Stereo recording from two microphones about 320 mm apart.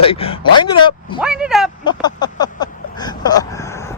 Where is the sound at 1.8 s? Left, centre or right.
Centre.